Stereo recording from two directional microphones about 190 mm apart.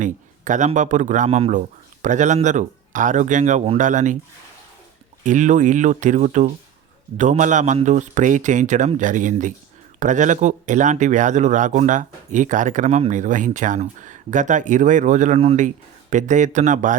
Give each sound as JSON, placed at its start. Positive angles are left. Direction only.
{"t": 0.0, "sound": "speech", "side_deg": -40}
{"t": 5.2, "sound": "speech", "side_deg": -40}